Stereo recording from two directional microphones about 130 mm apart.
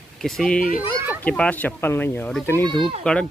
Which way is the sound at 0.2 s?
5° left (ahead or behind).